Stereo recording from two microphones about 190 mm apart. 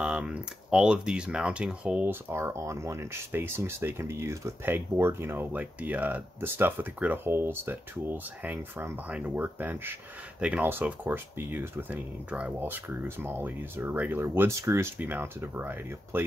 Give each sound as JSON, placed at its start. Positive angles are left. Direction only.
{"t": 0.0, "sound": "speech", "side_deg": -5}